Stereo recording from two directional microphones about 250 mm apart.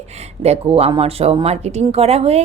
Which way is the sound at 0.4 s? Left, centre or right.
Right.